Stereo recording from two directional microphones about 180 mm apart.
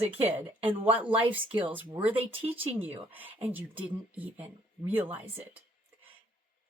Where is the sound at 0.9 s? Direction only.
10° right (ahead or behind).